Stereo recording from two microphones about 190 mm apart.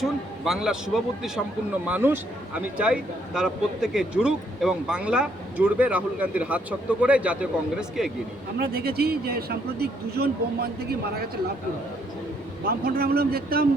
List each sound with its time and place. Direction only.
0.0 s a man's voice: centre (ahead or behind)
8.5 s speech: 55° right (ahead or behind)
12.6 s speech: 55° right (ahead or behind)